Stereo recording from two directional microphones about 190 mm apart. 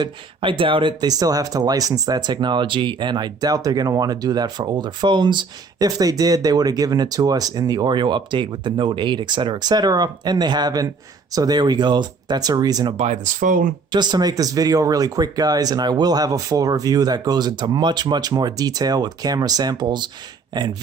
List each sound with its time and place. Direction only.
0.0 s speech: 25° right (ahead or behind)
13.0 s speech: 40° right (ahead or behind)
13.9 s speech: 25° right (ahead or behind)